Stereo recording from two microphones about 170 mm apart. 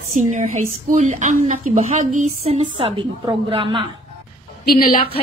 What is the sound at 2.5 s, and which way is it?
A woman's voice, 35° right (ahead or behind).